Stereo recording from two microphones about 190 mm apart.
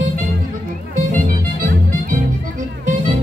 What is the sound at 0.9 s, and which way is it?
Music, 45° right (ahead or behind).